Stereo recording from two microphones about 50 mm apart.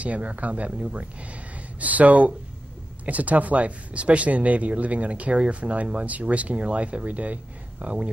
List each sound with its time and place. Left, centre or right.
0.0 s speech: right
1.8 s speech: right